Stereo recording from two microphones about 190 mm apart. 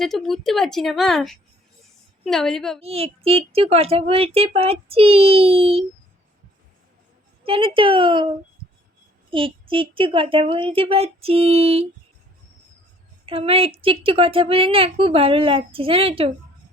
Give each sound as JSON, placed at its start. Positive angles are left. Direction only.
{"t": 0.0, "sound": "speech", "side_deg": 0}
{"t": 2.8, "sound": "speech", "side_deg": -30}
{"t": 7.4, "sound": "a woman's voice", "side_deg": -30}
{"t": 9.3, "sound": "speech", "side_deg": -25}
{"t": 13.2, "sound": "speech", "side_deg": -30}